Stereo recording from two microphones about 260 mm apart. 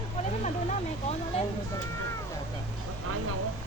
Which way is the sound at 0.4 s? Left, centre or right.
Left.